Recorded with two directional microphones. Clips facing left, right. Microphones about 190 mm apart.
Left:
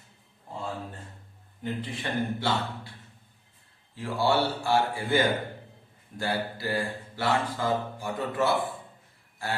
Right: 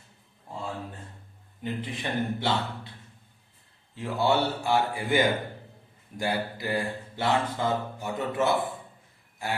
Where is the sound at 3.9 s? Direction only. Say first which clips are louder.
Even; 20° right (ahead or behind).